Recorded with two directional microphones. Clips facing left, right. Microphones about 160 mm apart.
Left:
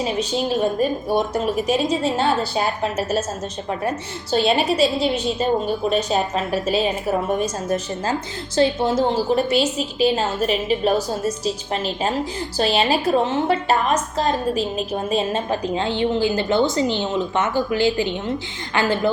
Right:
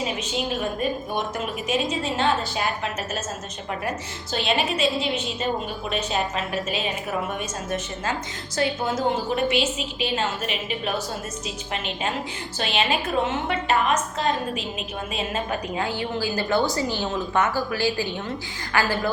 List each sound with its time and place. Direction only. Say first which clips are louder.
0.0 s a woman's voice: left 5 dB; 35° left (ahead or behind)
8.5 s a woman's voice: left 7 dB; 30° left (ahead or behind)